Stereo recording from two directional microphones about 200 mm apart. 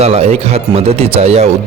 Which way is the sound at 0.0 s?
30° right (ahead or behind).